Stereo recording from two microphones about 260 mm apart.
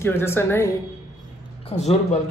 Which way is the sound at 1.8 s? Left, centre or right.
Left.